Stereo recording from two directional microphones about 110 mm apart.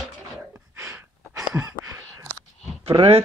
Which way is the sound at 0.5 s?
25° right (ahead or behind).